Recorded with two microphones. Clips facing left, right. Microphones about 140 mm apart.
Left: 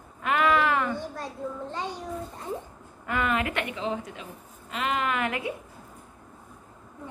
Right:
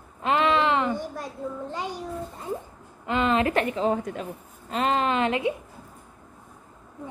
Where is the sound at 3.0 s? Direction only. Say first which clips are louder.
Right 4 dB; 25° right (ahead or behind); by 4.3 s 50° right (ahead or behind).